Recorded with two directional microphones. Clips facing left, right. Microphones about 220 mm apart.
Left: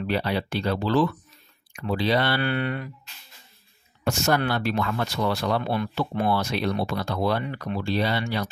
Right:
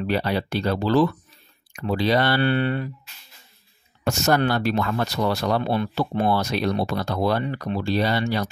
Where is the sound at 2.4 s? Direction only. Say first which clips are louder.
Right 5 dB; 30° right (ahead or behind).